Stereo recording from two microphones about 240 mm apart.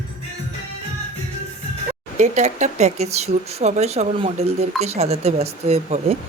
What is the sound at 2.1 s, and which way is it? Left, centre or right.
Speech, right.